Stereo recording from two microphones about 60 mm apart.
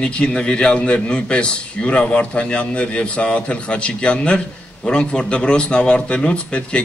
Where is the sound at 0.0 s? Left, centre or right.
Centre.